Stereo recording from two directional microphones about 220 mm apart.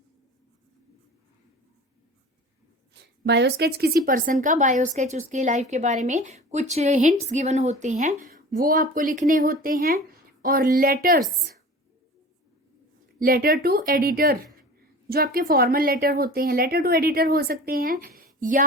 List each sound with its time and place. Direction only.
2.9 s a woman's voice: 50° right (ahead or behind)
13.1 s speech: 40° right (ahead or behind)